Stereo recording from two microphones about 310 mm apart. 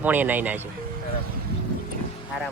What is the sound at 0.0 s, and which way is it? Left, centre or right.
Speech, centre.